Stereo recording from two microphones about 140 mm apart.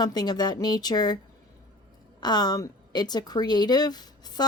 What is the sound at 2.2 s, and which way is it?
A woman's voice, 30° left (ahead or behind).